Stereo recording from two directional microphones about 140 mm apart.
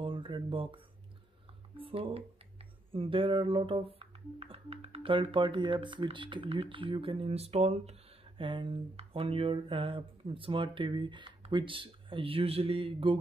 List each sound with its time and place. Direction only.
0.0 s speech: 35° right (ahead or behind)
1.8 s speech: 40° right (ahead or behind)
8.4 s speech: 40° right (ahead or behind)